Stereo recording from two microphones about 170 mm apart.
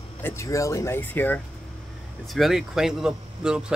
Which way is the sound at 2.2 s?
Centre (ahead or behind).